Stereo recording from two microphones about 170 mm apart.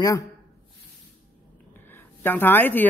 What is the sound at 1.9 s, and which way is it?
Speech, 10° left (ahead or behind).